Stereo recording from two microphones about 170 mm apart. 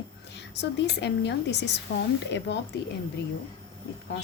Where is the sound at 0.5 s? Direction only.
85° left.